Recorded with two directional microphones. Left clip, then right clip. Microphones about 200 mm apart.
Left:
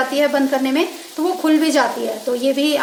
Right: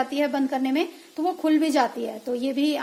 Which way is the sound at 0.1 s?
40° right (ahead or behind).